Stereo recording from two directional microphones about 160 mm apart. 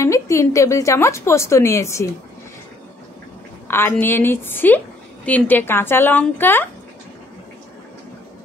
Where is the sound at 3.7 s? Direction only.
15° left (ahead or behind).